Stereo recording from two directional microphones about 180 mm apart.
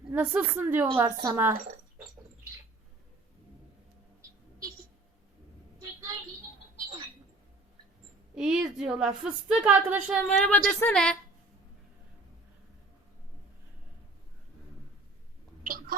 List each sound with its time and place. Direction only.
0.1 s a woman's voice: 10° right (ahead or behind)
8.4 s a woman's voice: 5° right (ahead or behind)
10.2 s a woman's voice: 10° left (ahead or behind)
15.6 s a sound: 50° right (ahead or behind)